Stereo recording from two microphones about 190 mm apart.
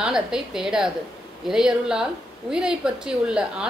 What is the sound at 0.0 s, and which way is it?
A woman's voice, 5° right (ahead or behind).